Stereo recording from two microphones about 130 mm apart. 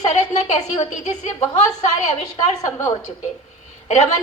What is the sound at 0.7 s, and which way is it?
Speech, 65° left (ahead or behind).